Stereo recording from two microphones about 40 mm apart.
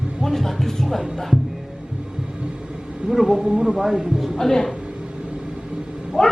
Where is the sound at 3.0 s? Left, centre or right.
Centre.